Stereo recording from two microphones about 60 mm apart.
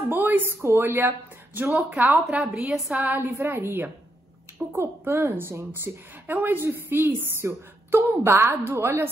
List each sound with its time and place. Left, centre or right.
0.1 s speech: right
2.0 s a woman's voice: right
2.9 s a woman's voice: right